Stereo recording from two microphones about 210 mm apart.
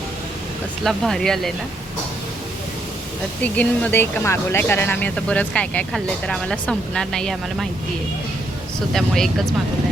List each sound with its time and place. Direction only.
0.9 s speech: centre (ahead or behind)
3.4 s speech: 5° left (ahead or behind)
8.9 s speech: centre (ahead or behind)